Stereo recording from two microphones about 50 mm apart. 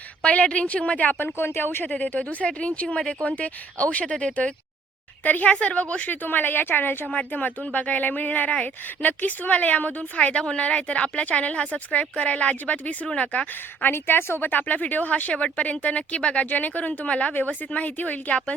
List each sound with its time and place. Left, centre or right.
0.2 s speech: left
1.2 s a woman's voice: left
1.8 s speech: left
5.2 s speech: left
7.0 s speech: left
13.8 s a woman's voice: left
14.5 s speech: left
16.5 s speech: left